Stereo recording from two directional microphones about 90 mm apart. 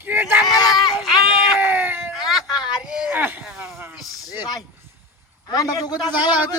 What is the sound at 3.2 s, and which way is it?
Speech, 20° right (ahead or behind).